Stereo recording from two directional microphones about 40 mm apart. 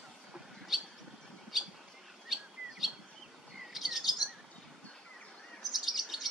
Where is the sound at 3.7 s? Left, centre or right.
Centre.